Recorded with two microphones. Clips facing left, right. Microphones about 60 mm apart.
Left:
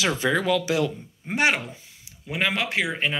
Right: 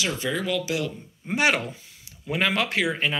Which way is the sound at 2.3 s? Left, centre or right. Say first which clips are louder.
Right 1 dB; centre.